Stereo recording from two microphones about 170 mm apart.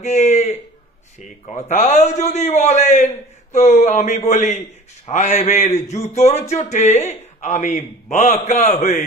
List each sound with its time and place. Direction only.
0.0 s a man's voice: 40° left (ahead or behind)